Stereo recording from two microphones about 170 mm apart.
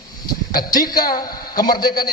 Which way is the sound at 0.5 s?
25° left (ahead or behind).